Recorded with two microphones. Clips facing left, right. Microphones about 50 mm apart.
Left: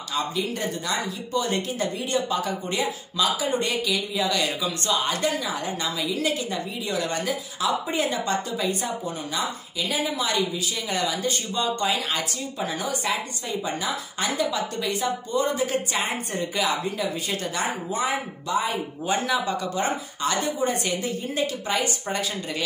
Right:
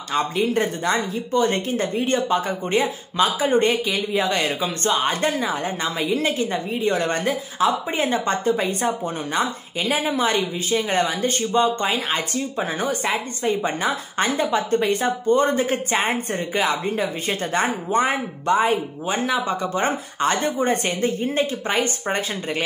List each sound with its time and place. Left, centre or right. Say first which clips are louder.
0.1 s speech: right 6 dB; right
19.0 s speech: right 2 dB; right